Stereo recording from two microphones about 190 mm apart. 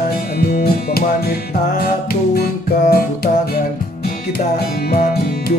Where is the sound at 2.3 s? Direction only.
55° left (ahead or behind).